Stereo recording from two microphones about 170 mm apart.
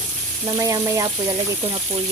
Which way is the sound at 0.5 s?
20° right (ahead or behind).